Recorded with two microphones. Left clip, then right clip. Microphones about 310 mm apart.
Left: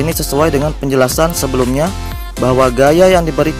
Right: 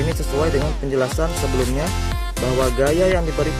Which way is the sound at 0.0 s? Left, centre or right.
Left.